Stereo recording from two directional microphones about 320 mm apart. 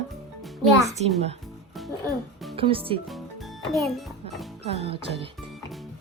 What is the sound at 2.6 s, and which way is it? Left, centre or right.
Speech, centre.